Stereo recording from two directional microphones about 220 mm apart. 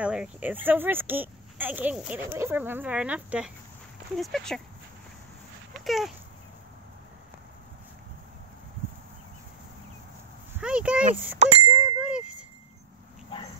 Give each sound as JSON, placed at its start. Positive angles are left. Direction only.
{"t": 0.0, "sound": "speech", "side_deg": -5}
{"t": 5.9, "sound": "speech", "side_deg": 0}
{"t": 10.6, "sound": "speech", "side_deg": -5}
{"t": 11.3, "sound": "bicycle bell", "side_deg": -30}
{"t": 12.0, "sound": "wind chime", "side_deg": -5}